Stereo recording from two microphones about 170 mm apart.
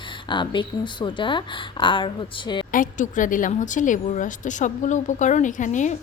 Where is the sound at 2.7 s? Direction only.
50° left (ahead or behind).